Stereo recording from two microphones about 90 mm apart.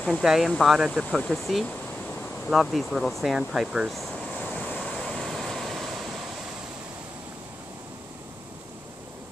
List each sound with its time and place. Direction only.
0.2 s speech: 5° right (ahead or behind)
4.4 s waves: 15° left (ahead or behind)
4.7 s vehicle: centre (ahead or behind)